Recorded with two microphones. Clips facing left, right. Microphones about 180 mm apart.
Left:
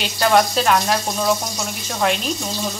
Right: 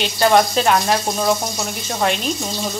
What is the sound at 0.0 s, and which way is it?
Speech, centre (ahead or behind).